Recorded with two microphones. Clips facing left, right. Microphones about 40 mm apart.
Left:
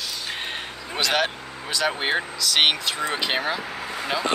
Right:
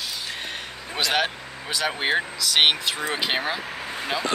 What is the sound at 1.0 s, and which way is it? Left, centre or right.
Speech, centre.